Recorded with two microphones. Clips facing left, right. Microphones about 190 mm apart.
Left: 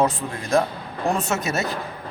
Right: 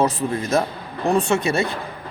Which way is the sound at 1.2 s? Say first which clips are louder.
Right 6 dB; 30° right (ahead or behind).